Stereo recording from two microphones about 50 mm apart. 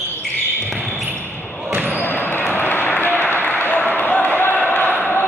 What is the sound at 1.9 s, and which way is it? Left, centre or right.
Basketball bounce, left.